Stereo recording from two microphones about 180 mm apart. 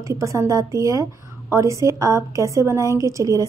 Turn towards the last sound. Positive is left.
turn(degrees=-20)  # may be behind; listen again after turning